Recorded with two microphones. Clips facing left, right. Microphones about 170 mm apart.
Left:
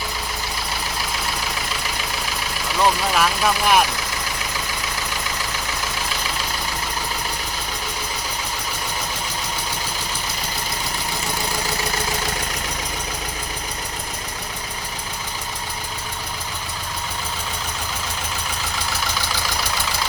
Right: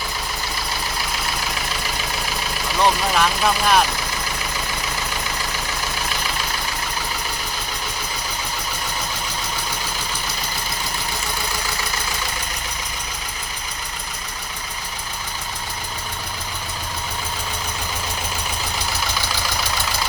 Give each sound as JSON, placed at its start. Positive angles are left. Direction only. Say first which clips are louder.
{"t": 2.8, "sound": "speech", "louder": "even", "side_deg": 5}